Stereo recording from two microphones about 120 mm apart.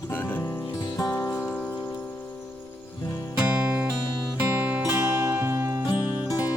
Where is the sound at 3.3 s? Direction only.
10° right (ahead or behind).